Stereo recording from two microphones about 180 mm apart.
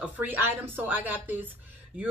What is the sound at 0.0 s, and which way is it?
A woman's voice, 10° right (ahead or behind).